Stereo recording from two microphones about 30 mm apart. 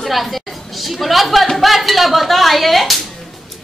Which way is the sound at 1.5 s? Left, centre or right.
Centre.